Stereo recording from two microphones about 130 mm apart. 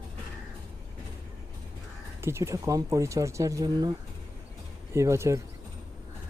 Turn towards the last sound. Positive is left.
turn(degrees=-20)  # may be behind; listen again after turning